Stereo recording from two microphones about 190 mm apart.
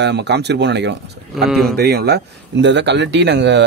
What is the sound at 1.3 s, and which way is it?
Speech, centre (ahead or behind).